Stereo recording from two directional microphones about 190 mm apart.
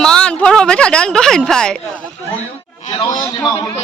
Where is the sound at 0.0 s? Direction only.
5° left (ahead or behind).